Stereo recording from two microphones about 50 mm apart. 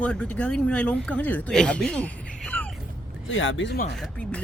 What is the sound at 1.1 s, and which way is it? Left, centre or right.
Speech, left.